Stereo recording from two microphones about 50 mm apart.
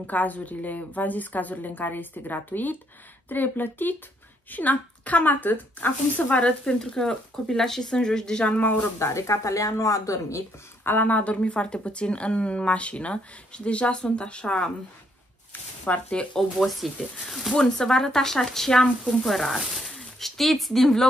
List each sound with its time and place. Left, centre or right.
0.0 s a woman's voice: left
6.6 s speech: centre
8.5 s a woman's voice: left
9.0 s speech: left
10.8 s a sound: left
11.1 s speech: left
15.8 s speech: left
16.3 s speech: centre
17.6 s speech: centre